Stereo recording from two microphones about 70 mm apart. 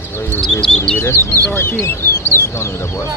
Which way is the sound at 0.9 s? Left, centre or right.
Left.